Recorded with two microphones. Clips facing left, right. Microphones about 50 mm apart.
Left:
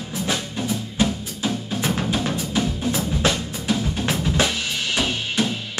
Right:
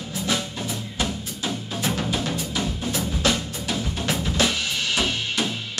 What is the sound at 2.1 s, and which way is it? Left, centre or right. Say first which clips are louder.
Drum: left 3 dB; left.